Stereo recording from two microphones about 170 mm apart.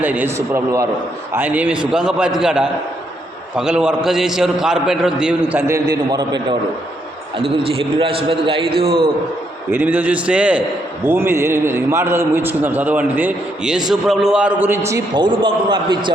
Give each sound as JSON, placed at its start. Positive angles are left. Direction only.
{"t": 0.0, "sound": "a man's voice", "side_deg": -10}
{"t": 9.7, "sound": "a man's voice", "side_deg": -10}
{"t": 14.8, "sound": "a man's voice", "side_deg": -20}